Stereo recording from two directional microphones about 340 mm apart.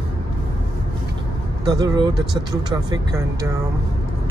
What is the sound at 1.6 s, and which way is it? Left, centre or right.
Speech, centre.